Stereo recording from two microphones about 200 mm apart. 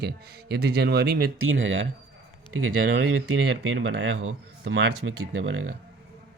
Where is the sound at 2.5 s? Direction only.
90° right; by 5.6 s 70° right (ahead or behind).